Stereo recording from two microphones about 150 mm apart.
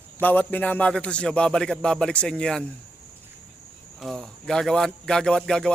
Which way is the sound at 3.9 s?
Centre (ahead or behind).